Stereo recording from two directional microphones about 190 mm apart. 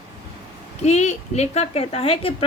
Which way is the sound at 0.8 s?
35° left (ahead or behind).